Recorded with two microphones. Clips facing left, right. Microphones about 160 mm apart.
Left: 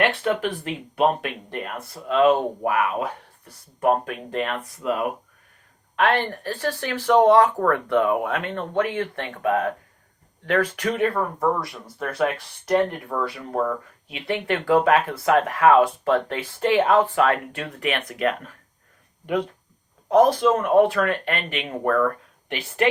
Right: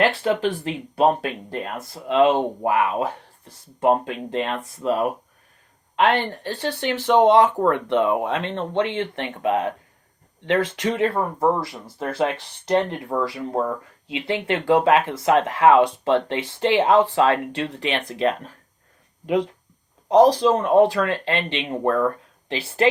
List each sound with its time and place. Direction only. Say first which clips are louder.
0.0 s speech: right 2 dB; 30° right (ahead or behind)
20.1 s speech: right 2 dB; 35° right (ahead or behind)